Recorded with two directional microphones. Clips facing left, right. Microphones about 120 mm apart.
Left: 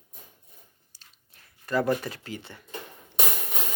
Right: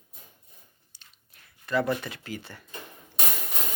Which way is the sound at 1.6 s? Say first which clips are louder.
Left 1 dB; 40° left (ahead or behind).